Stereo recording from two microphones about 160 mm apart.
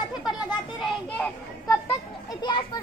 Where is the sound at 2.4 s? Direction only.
30° left (ahead or behind).